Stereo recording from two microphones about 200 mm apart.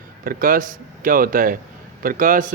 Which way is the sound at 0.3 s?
45° right (ahead or behind).